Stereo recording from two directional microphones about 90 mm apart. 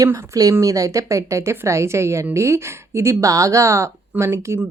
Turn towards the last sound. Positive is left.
turn(degrees=-30)  # may be behind; listen again after turning